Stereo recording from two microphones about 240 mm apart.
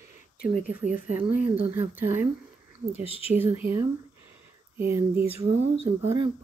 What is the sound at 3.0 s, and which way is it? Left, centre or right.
Speech, left.